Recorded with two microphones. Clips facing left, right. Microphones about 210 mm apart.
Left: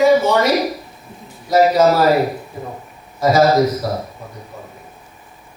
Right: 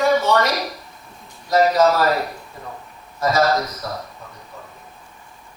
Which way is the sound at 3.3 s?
30° left (ahead or behind).